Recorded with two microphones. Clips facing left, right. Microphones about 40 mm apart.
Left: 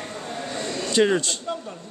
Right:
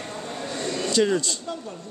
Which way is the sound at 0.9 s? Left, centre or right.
Left.